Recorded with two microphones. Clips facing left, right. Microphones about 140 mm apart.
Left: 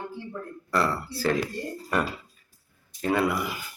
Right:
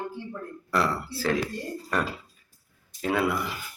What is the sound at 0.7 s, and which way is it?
Speech, 5° right (ahead or behind).